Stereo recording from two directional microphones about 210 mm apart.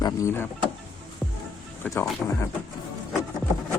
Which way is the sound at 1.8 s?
15° left (ahead or behind).